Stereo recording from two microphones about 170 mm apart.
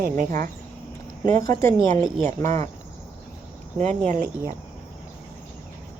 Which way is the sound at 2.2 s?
45° right (ahead or behind).